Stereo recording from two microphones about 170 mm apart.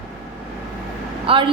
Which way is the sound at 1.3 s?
30° right (ahead or behind).